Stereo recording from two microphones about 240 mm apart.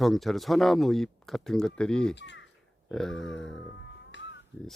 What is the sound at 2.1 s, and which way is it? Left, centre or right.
Speech, left.